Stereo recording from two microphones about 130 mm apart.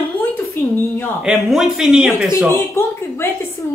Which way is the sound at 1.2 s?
Centre (ahead or behind).